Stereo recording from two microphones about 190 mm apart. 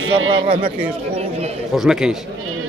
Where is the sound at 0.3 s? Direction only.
30° right (ahead or behind).